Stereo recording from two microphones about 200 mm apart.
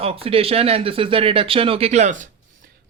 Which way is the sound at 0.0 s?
30° right (ahead or behind).